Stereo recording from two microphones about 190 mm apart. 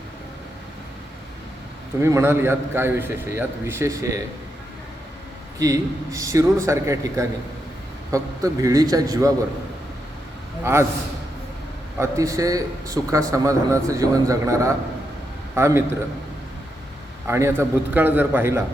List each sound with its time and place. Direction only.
2.0 s a man's voice: 15° right (ahead or behind)
5.5 s a man's voice: 15° right (ahead or behind)
10.6 s a man's voice: 15° right (ahead or behind)
11.9 s a man's voice: 15° right (ahead or behind)
17.2 s a man's voice: 15° right (ahead or behind)